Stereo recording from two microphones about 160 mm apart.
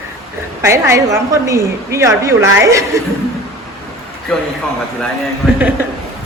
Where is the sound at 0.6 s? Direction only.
15° right (ahead or behind).